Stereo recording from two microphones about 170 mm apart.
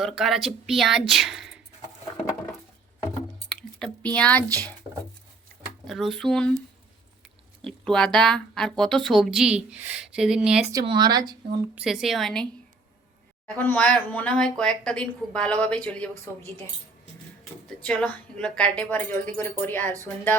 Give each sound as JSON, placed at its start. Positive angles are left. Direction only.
{"t": 0.0, "sound": "speech", "side_deg": 0}
{"t": 3.5, "sound": "a sound", "side_deg": 5}
{"t": 5.9, "sound": "speech", "side_deg": 0}
{"t": 7.6, "sound": "speech", "side_deg": 5}
{"t": 10.7, "sound": "speech", "side_deg": -25}
{"t": 11.7, "sound": "speech", "side_deg": -5}
{"t": 13.6, "sound": "a woman's voice", "side_deg": 10}
{"t": 17.8, "sound": "a woman's voice", "side_deg": 5}